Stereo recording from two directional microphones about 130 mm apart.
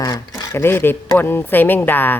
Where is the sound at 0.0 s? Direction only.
25° left (ahead or behind).